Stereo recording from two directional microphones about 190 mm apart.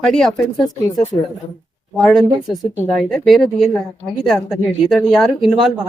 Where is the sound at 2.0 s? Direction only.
Centre (ahead or behind).